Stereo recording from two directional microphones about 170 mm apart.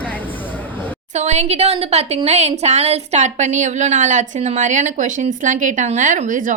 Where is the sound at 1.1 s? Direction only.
40° right (ahead or behind).